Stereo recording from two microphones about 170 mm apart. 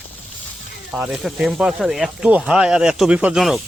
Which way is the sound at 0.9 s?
10° right (ahead or behind).